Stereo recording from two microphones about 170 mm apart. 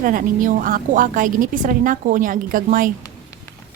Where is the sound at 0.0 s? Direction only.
55° right (ahead or behind).